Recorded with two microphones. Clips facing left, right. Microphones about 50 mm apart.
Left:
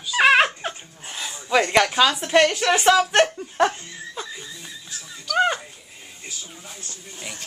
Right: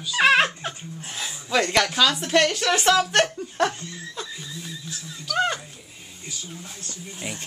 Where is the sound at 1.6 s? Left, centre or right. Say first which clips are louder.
Left 2 dB; centre.